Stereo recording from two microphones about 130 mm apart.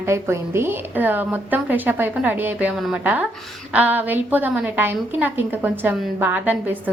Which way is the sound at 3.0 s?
10° right (ahead or behind).